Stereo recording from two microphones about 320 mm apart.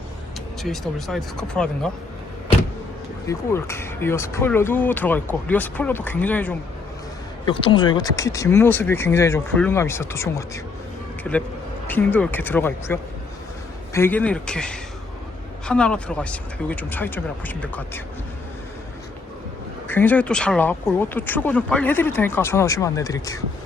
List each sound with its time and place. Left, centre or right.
0.6 s speech: centre
3.2 s speech: centre
19.9 s speech: centre